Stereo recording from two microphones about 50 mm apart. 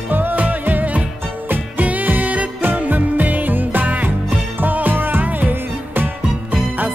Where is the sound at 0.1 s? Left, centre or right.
Right.